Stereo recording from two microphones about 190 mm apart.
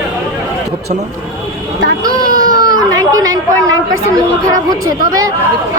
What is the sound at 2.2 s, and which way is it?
Baby cry, 45° right (ahead or behind).